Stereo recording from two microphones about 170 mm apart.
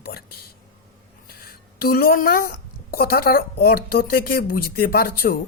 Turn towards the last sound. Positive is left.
turn(degrees=65)  # may be behind; listen again after turning